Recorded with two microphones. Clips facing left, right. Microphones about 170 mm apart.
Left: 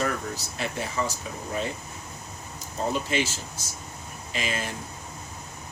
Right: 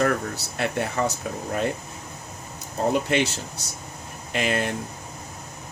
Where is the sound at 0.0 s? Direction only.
60° right (ahead or behind).